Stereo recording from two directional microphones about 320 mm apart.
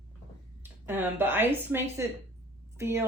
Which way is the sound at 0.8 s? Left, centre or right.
Centre.